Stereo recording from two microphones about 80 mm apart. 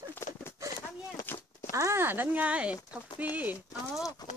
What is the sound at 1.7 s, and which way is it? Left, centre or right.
Speech, right.